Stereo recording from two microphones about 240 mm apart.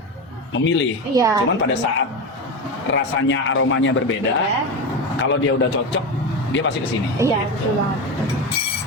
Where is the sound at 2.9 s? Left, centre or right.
Left.